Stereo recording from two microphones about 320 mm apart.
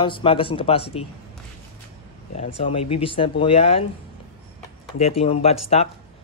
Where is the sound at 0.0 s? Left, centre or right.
Centre.